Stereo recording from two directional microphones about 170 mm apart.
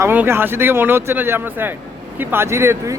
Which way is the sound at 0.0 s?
15° right (ahead or behind).